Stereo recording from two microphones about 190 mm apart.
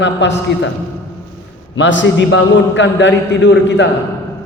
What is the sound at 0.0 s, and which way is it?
Speech, 70° left (ahead or behind).